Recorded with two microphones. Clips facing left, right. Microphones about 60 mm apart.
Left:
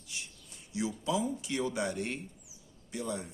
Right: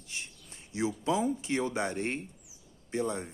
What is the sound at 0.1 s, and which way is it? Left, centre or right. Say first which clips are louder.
Speech: right 2 dB; right.